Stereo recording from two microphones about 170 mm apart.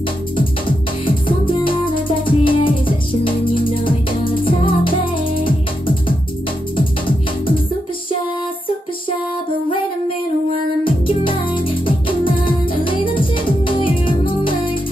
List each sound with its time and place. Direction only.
0.4 s music: 30° left (ahead or behind)
10.8 s music: 30° left (ahead or behind)